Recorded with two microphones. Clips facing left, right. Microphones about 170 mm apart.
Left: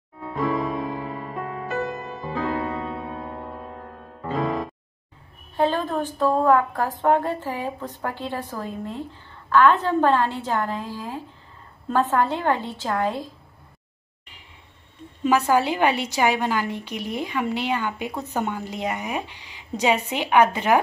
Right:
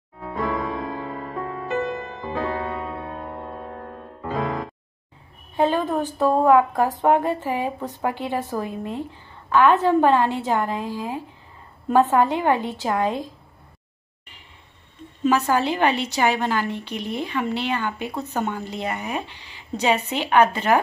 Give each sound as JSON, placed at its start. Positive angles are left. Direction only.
{"t": 0.4, "sound": "music", "side_deg": 20}
{"t": 2.3, "sound": "music", "side_deg": 0}
{"t": 5.6, "sound": "a woman's voice", "side_deg": -15}
{"t": 15.2, "sound": "a woman's voice", "side_deg": 10}